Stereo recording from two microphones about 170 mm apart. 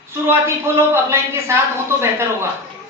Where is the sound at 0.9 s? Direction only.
15° right (ahead or behind).